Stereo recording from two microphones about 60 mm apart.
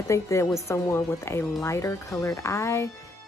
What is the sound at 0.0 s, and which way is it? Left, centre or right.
Speech, left.